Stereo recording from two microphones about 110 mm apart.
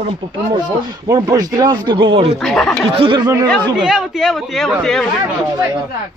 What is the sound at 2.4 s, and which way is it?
Speech, 5° left (ahead or behind).